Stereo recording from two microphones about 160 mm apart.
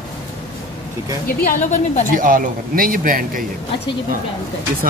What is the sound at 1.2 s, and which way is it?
Speech, 55° left (ahead or behind).